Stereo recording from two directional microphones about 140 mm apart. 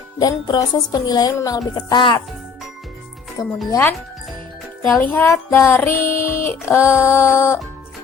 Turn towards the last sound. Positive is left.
turn(degrees=15)  # may be behind; listen again after turning